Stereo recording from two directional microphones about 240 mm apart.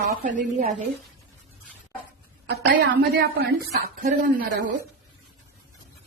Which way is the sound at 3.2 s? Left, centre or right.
Right.